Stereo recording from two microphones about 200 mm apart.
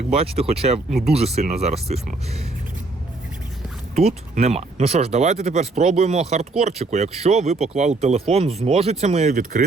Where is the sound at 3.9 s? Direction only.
35° right (ahead or behind).